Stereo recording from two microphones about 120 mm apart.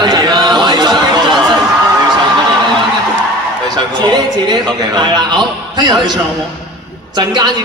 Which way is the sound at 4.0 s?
40° right (ahead or behind).